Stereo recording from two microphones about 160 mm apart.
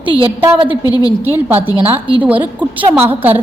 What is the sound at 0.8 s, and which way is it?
Speech, 25° left (ahead or behind).